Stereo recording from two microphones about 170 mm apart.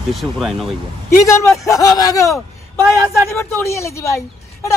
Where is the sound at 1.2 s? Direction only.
15° left (ahead or behind).